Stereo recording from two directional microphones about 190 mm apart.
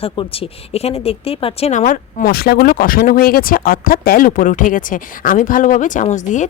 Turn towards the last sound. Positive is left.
turn(degrees=40)  # may be behind; listen again after turning